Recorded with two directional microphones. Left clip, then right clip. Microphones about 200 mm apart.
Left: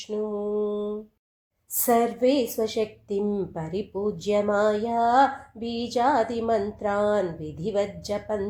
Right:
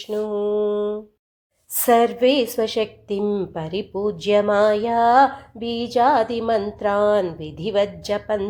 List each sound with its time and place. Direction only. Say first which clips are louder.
0.1 s mantra: right 6 dB; 25° right (ahead or behind)
1.7 s a woman's voice: right 6 dB; 25° right (ahead or behind)